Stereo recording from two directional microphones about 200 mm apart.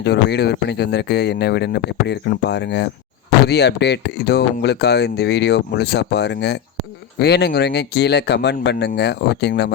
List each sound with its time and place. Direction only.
0.0 s speech: 55° left (ahead or behind)